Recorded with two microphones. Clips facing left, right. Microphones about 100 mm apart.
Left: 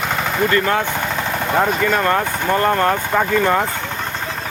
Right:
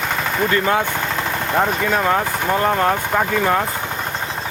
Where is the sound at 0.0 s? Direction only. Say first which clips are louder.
Left 1 dB; centre (ahead or behind).